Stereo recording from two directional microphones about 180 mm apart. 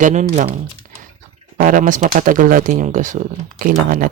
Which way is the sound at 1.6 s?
50° right (ahead or behind).